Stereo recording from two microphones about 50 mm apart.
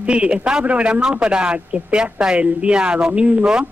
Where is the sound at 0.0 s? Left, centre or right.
Right.